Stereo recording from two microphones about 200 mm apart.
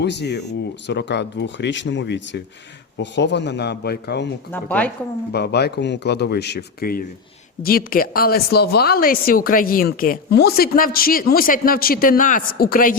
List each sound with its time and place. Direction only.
0.0 s speech: 60° left (ahead or behind)
4.5 s a woman's voice: 5° left (ahead or behind)
5.3 s a woman's voice: 55° left (ahead or behind)